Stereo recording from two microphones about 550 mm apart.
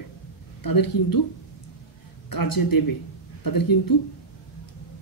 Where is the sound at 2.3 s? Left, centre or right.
Left.